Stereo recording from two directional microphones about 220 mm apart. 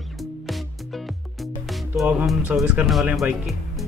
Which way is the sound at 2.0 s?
5° right (ahead or behind).